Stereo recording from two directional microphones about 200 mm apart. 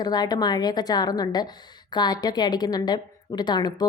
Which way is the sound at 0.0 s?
20° left (ahead or behind).